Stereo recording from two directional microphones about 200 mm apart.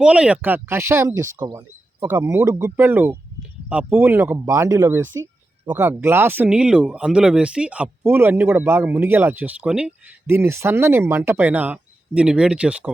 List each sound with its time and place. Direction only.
0.0 s speech: 5° right (ahead or behind)